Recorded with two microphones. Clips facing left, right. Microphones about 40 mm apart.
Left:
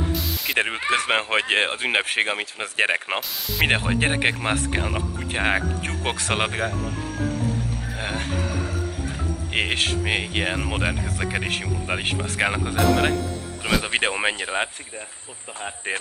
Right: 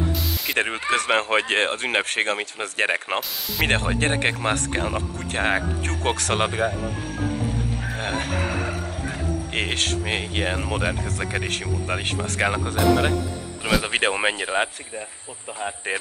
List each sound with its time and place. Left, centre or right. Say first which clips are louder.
0.5 s speech: left 1 dB; centre
8.4 s music: right 2 dB; right
9.5 s speech: left 3 dB; centre